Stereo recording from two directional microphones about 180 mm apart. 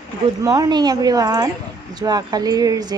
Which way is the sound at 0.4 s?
20° right (ahead or behind).